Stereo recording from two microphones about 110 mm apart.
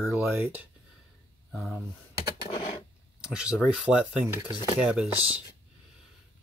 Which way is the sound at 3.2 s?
5° right (ahead or behind).